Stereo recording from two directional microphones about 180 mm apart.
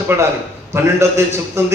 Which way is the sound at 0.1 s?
15° right (ahead or behind).